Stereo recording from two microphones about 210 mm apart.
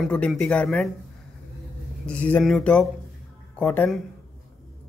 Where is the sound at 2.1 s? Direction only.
5° left (ahead or behind).